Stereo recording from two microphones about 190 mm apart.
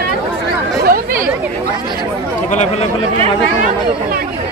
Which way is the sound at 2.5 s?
35° left (ahead or behind).